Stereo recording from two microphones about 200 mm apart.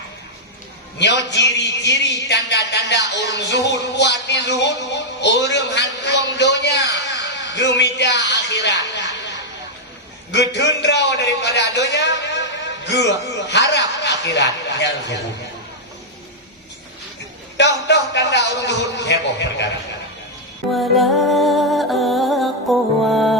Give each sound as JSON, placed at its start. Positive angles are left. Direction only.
{"t": 0.9, "sound": "a man's voice", "side_deg": 60}
{"t": 10.3, "sound": "a man's voice", "side_deg": 60}
{"t": 17.6, "sound": "a man's voice", "side_deg": 60}
{"t": 20.7, "sound": "music", "side_deg": 0}